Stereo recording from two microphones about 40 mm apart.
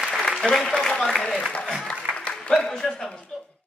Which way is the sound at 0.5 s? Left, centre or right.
Centre.